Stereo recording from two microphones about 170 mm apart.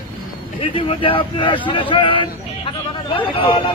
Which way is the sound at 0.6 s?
30° left (ahead or behind).